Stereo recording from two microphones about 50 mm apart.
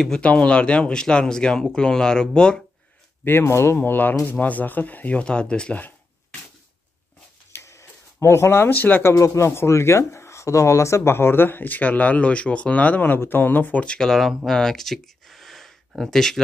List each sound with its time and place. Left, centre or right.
0.2 s speech: left
3.4 s speech: left
3.7 s speech: left
5.2 s speech: left
7.6 s a sound: left
8.6 s speech: left
9.0 s speech: left
13.7 s speech: centre
14.4 s a sound: centre
16.0 s speech: centre